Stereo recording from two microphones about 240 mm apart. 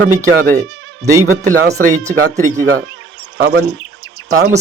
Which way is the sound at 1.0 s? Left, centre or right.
Centre.